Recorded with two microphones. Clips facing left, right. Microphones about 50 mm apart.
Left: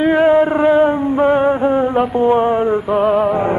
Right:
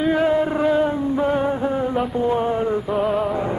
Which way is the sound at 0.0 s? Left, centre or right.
Left.